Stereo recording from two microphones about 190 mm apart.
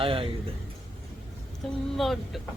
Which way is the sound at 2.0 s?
Centre (ahead or behind).